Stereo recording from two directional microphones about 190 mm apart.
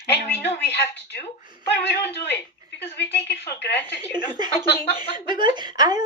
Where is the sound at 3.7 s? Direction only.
10° left (ahead or behind).